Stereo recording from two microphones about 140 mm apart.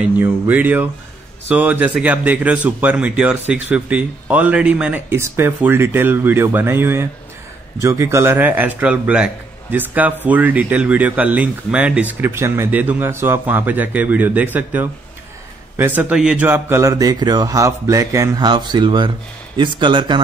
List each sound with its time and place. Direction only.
0.0 s a man's voice: 10° right (ahead or behind); by 20.2 s 35° right (ahead or behind)